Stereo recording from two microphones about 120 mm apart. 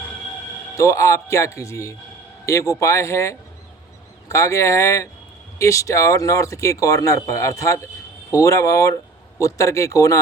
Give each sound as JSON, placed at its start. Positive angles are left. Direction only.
{"t": 0.8, "sound": "speech", "side_deg": 25}